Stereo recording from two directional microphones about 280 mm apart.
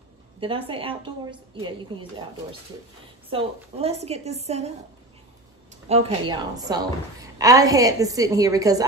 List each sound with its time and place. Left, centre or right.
0.4 s a woman's voice: centre
3.3 s a woman's voice: right
5.9 s a woman's voice: right